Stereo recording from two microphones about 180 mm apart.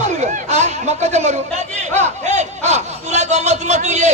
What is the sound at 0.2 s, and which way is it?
A man's voice, 45° right (ahead or behind).